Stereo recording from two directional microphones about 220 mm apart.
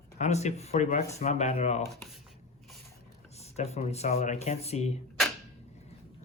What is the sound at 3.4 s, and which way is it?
Speech, 30° left (ahead or behind).